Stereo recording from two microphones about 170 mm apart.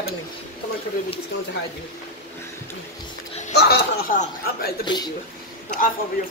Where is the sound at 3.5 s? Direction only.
75° left (ahead or behind).